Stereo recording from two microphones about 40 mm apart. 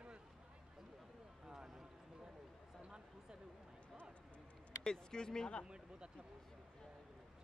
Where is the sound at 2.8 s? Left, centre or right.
Right.